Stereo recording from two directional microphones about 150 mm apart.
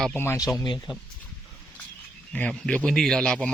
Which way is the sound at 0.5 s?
30° left (ahead or behind).